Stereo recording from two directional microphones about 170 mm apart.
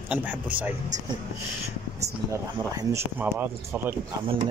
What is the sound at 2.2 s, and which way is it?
Speech, 15° right (ahead or behind).